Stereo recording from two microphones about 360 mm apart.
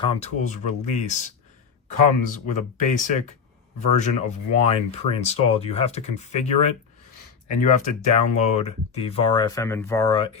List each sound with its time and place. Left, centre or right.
0.0 s speech: centre
8.0 s speech: centre